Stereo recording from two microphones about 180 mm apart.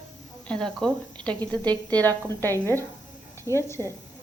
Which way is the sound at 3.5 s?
20° right (ahead or behind).